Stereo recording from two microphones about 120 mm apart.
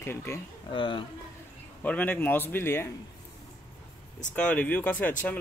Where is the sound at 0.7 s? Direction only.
45° left (ahead or behind).